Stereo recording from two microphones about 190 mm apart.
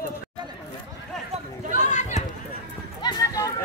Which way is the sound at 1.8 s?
40° left (ahead or behind).